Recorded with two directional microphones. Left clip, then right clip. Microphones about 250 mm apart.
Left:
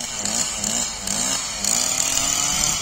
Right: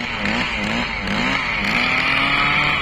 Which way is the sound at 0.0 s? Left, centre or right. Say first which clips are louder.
Right 5 dB; left.